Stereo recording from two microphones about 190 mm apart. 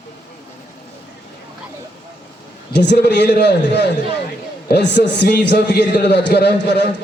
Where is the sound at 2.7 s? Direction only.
65° left (ahead or behind).